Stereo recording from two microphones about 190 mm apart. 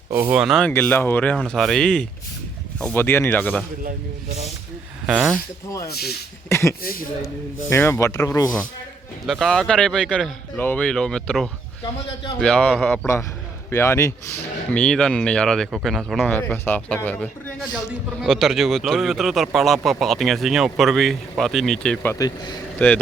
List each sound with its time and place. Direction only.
0.1 s speech: 10° right (ahead or behind)
0.7 s speech: 10° left (ahead or behind)
5.0 s speech: 10° right (ahead or behind)
5.6 s speech: 15° left (ahead or behind)
9.2 s speech: centre (ahead or behind)
22.1 s speech: 20° left (ahead or behind)